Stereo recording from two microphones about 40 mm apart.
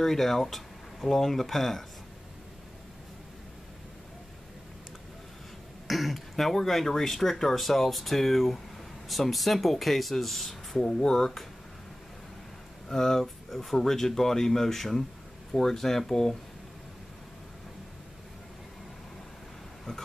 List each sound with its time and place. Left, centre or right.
0.0 s speech: centre
5.9 s speech: centre
10.8 s speech: left
12.8 s speech: centre